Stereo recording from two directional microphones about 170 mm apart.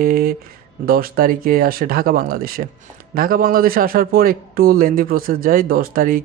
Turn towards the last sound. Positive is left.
turn(degrees=-55)  # may be behind; listen again after turning